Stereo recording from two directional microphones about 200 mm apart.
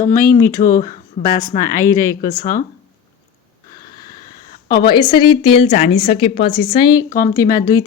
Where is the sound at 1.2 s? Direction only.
50° left (ahead or behind).